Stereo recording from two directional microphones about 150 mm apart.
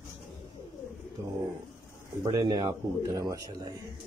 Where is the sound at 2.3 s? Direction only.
25° right (ahead or behind).